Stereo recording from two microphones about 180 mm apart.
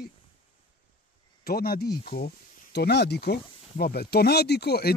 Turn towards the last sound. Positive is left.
turn(degrees=60)  # may be behind; listen again after turning